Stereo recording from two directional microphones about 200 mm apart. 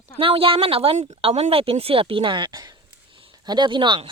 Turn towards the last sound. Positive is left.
turn(degrees=-25)  # may be behind; listen again after turning